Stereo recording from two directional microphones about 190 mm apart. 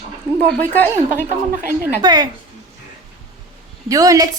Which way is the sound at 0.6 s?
10° left (ahead or behind).